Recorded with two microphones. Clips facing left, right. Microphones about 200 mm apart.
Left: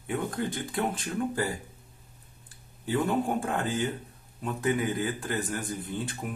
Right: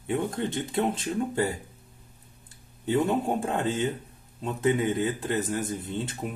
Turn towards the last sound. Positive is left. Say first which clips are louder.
# right 2 dB
turn(degrees=-25)  # may be behind; listen again after turning